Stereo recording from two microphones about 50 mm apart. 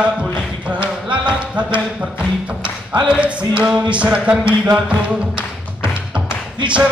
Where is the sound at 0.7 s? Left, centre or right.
Right.